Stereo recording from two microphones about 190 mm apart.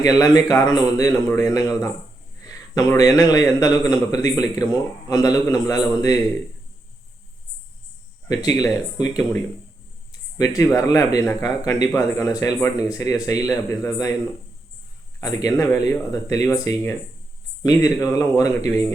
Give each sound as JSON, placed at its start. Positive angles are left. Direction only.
{"t": 0.0, "sound": "a man's voice", "side_deg": 20}
{"t": 8.3, "sound": "a man's voice", "side_deg": 20}
{"t": 15.2, "sound": "a man's voice", "side_deg": 15}